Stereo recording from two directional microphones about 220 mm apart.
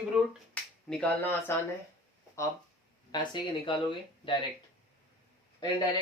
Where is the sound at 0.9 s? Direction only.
5° left (ahead or behind).